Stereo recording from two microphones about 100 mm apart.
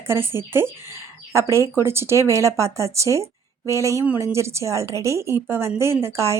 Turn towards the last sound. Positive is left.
turn(degrees=-30)  # may be behind; listen again after turning